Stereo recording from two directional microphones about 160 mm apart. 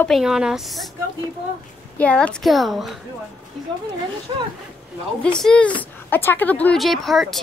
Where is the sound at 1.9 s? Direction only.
10° left (ahead or behind).